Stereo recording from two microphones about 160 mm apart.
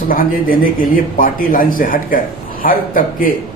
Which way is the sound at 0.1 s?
60° left (ahead or behind).